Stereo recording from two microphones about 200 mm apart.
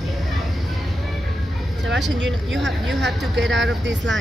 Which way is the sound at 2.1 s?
65° right (ahead or behind).